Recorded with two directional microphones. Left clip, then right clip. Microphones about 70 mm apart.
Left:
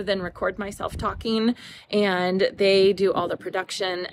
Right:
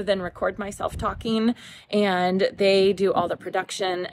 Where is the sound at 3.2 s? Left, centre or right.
Centre.